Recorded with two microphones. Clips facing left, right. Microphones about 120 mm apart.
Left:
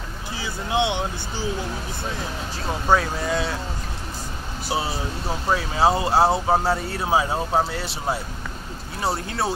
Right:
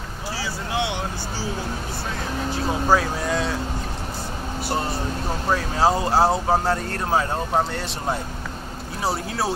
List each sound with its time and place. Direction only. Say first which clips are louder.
0.4 s speech: left 3 dB; 20° left (ahead or behind)
2.7 s speech: even; centre (ahead or behind)
4.6 s speech: even; 10° left (ahead or behind)